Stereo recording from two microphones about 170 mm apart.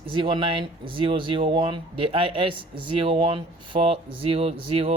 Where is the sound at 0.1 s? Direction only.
30° right (ahead or behind).